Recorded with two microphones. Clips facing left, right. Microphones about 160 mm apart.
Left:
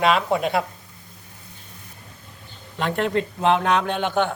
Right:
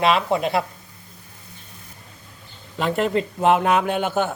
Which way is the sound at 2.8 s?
5° right (ahead or behind).